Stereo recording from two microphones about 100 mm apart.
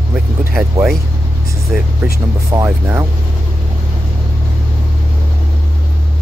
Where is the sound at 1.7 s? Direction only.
10° right (ahead or behind).